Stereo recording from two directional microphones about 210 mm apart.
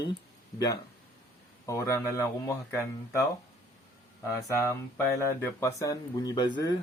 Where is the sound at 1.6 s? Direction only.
15° left (ahead or behind).